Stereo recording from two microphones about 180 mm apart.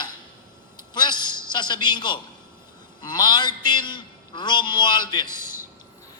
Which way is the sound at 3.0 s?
25° left (ahead or behind).